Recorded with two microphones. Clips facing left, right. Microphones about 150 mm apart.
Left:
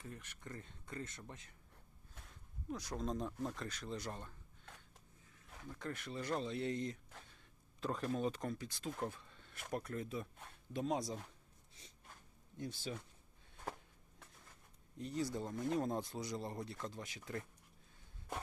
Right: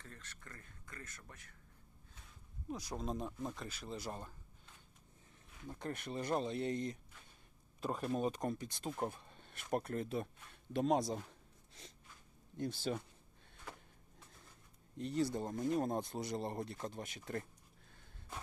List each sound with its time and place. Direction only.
0.0 s speech: 15° left (ahead or behind)
2.7 s speech: 10° right (ahead or behind)
6.0 s speech: 20° right (ahead or behind)
9.5 s speech: 60° right (ahead or behind)
10.7 s speech: 70° right (ahead or behind)
14.9 s speech: 70° right (ahead or behind)
15.5 s speech: 50° right (ahead or behind)